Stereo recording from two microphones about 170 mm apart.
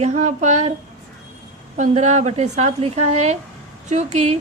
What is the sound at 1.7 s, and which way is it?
A woman's voice, 45° right (ahead or behind).